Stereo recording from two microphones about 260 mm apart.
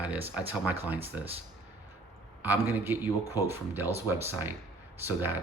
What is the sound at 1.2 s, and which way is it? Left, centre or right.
Speech, centre.